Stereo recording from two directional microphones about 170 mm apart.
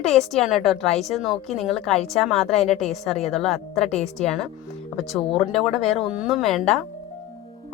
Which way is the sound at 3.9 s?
40° left (ahead or behind).